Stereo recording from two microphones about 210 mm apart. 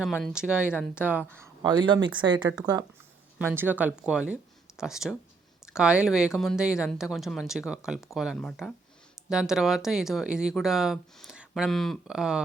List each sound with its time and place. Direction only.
0.1 s speech: 5° left (ahead or behind)
1.7 s speech: 20° right (ahead or behind); by 12.4 s 5° right (ahead or behind)